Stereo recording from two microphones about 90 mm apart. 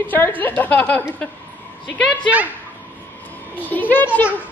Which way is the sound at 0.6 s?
20° left (ahead or behind).